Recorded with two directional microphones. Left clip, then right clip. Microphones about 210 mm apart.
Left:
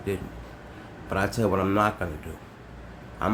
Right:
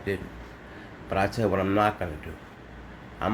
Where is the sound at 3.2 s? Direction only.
15° left (ahead or behind).